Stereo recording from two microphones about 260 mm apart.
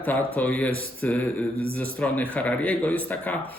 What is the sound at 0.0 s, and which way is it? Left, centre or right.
A man's voice, centre.